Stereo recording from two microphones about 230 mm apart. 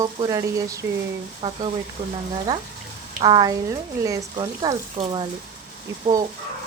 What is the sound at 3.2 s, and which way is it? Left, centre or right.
Speech, centre.